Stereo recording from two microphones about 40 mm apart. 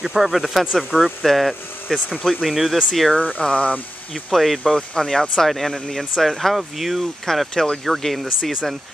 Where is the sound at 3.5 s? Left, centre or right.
Left.